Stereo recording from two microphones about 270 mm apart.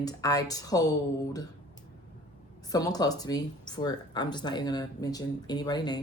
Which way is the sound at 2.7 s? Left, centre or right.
Centre.